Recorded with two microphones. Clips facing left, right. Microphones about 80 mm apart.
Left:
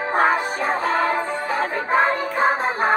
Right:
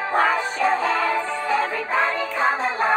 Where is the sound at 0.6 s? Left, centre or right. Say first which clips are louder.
Even; left.